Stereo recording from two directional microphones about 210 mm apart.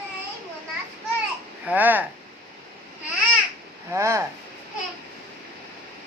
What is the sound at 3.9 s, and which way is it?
Speech, 15° right (ahead or behind).